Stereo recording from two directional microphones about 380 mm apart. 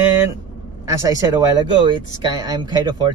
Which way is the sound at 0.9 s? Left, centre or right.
Centre.